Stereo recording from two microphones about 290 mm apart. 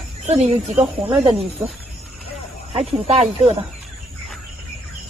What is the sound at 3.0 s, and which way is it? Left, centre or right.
Speech, right.